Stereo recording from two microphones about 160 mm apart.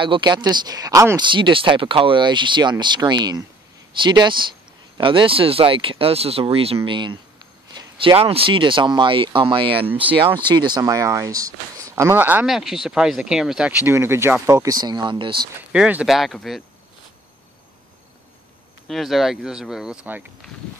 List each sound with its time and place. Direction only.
0.0 s speech: 30° right (ahead or behind)
15.7 s speech: 5° right (ahead or behind)
18.9 s speech: centre (ahead or behind)